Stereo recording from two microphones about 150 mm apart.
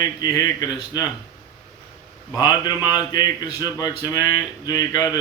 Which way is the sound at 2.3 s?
30° left (ahead or behind).